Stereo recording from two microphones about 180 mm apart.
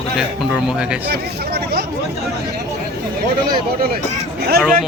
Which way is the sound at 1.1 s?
60° right (ahead or behind).